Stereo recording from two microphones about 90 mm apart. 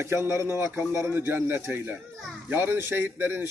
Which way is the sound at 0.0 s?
30° right (ahead or behind).